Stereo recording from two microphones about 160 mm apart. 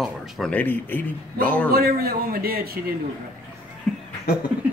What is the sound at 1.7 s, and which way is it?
A man's voice, 70° right (ahead or behind).